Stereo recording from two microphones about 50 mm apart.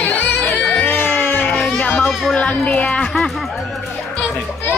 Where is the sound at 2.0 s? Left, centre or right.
Centre.